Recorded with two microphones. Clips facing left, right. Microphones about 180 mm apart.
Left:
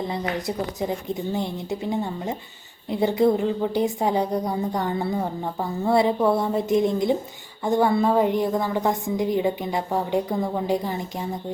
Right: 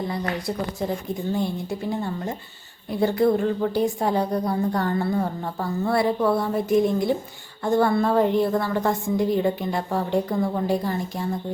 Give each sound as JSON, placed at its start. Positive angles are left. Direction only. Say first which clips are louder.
{"t": 0.0, "sound": "a woman's voice", "louder": "even", "side_deg": 20}